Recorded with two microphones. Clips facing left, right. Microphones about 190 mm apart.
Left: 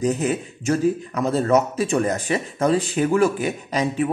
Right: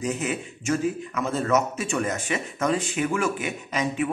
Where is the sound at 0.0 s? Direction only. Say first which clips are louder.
Left 6 dB; 35° left (ahead or behind).